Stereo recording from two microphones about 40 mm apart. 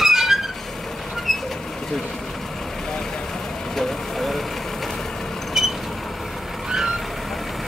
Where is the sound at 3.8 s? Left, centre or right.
Centre.